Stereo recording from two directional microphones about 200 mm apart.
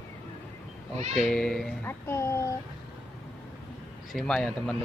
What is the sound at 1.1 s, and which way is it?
A child's voice, centre (ahead or behind).